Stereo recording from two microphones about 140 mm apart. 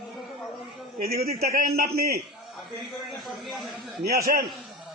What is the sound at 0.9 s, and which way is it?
A man's voice, 90° right.